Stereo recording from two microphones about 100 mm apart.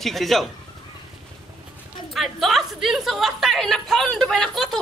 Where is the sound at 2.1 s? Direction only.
Centre (ahead or behind).